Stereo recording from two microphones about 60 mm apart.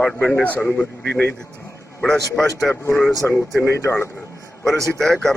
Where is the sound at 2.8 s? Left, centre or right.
Left.